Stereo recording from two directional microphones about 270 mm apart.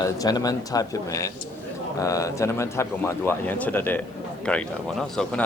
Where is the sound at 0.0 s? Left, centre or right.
Centre.